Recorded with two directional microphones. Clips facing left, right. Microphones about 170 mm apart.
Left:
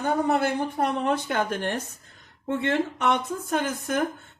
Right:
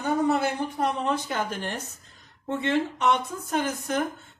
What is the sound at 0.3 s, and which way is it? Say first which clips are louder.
Speech: left 1 dB; 55° left (ahead or behind).